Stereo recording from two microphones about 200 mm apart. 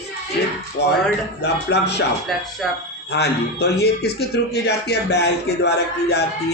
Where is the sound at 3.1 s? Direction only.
55° left (ahead or behind).